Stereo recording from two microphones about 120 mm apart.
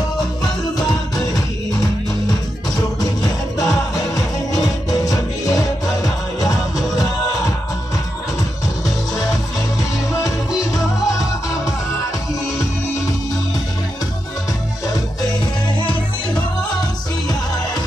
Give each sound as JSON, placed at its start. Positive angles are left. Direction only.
{"t": 3.5, "sound": "music", "side_deg": 25}